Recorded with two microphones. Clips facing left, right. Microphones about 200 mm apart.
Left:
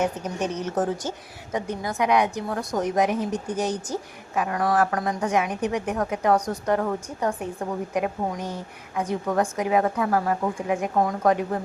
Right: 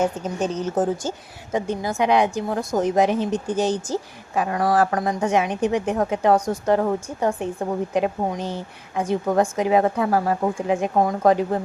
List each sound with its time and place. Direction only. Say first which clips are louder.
0.0 s a woman's voice: right 3 dB; 30° right (ahead or behind)